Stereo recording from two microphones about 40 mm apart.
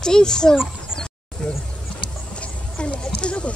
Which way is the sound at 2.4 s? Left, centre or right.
Left.